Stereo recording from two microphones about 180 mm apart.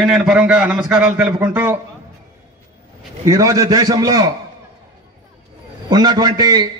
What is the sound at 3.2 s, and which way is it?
A man's voice, 15° right (ahead or behind).